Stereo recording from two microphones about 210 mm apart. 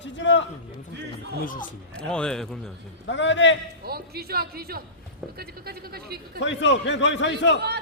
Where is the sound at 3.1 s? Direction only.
60° left (ahead or behind).